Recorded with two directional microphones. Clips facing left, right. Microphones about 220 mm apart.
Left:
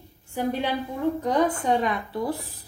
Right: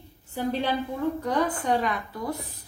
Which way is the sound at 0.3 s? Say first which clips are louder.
Left 1 dB; 15° left (ahead or behind).